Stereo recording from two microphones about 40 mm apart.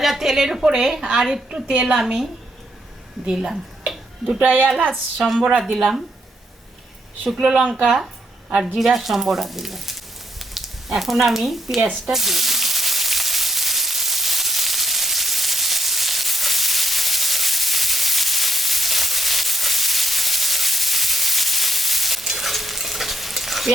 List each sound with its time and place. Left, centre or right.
0.0 s a woman's voice: centre
3.2 s a sound: centre
5.5 s speech: centre
5.7 s a woman's voice: centre
7.3 s speech: centre
8.5 s speech: centre
12.0 s sizzle: centre